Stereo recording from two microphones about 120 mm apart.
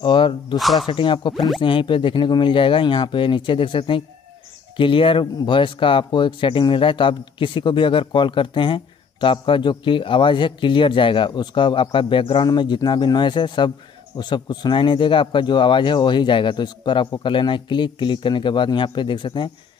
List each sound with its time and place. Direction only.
0.0 s speech: 40° left (ahead or behind)
0.6 s speech: centre (ahead or behind)
0.8 s speech: 45° left (ahead or behind)
1.3 s speech: centre (ahead or behind)
1.6 s speech: 45° left (ahead or behind)